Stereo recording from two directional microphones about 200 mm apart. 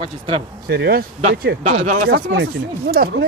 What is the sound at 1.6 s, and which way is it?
Speech, 40° right (ahead or behind).